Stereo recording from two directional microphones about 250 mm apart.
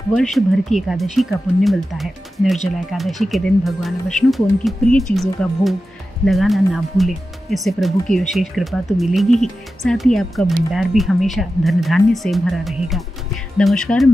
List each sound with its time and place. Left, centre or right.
0.1 s speech: centre